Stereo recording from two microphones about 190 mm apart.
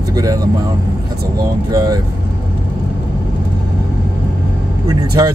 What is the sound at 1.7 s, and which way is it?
Speech, 20° right (ahead or behind).